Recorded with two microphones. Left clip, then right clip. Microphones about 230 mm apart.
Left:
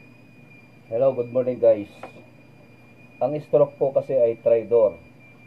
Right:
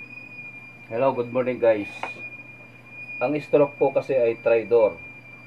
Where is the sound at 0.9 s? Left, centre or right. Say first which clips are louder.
Left 2 dB; right.